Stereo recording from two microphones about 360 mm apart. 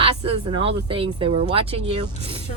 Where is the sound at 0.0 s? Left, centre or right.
Centre.